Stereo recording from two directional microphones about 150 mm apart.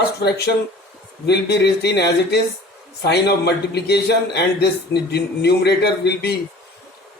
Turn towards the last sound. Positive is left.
turn(degrees=90)